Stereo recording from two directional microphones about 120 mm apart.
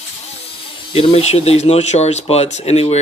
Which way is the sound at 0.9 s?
55° left (ahead or behind).